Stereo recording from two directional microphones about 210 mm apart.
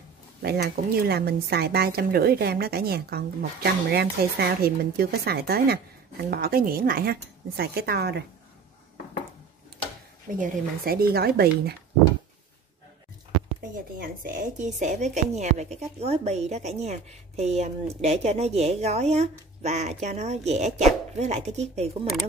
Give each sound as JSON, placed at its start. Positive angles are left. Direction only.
{"t": 0.4, "sound": "a woman's voice", "side_deg": -50}
{"t": 10.3, "sound": "a woman's voice", "side_deg": -40}
{"t": 13.7, "sound": "a woman's voice", "side_deg": -45}